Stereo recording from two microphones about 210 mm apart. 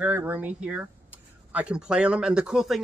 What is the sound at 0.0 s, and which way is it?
Speech, 10° right (ahead or behind).